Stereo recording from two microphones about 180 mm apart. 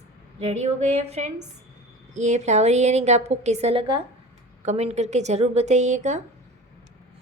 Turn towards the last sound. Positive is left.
turn(degrees=-40)  # may be behind; listen again after turning